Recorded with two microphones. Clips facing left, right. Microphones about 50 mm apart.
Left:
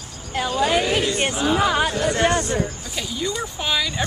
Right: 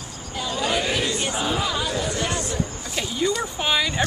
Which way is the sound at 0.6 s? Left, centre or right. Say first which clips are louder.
Left 3 dB; left.